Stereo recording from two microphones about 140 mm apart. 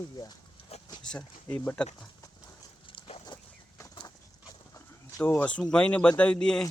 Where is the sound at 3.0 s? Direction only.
45° left (ahead or behind).